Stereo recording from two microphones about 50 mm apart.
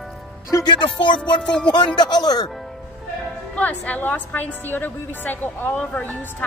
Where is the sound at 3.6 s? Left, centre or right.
Left.